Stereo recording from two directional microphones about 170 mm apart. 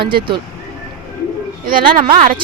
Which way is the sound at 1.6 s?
55° right (ahead or behind).